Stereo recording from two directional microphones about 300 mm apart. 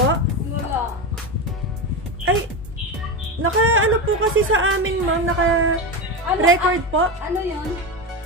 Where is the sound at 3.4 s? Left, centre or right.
Right.